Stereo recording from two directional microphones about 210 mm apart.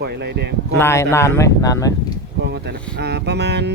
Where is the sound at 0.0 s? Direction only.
50° right (ahead or behind).